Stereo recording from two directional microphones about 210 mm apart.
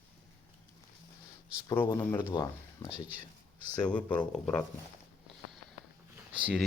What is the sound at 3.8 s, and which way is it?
Speech, 5° left (ahead or behind).